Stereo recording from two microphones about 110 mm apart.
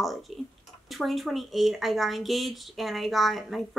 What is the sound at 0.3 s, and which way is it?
Tick-tock, centre (ahead or behind).